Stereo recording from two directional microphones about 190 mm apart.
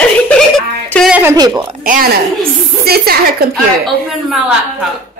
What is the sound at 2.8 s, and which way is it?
Speech, 55° right (ahead or behind).